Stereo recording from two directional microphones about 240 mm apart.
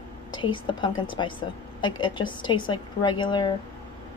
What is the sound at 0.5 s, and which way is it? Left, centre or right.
A woman's voice, centre.